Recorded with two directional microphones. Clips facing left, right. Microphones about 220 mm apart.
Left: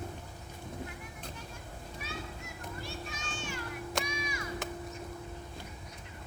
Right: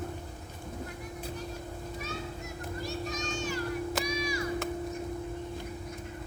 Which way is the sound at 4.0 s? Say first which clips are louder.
Right 6 dB; 35° right (ahead or behind).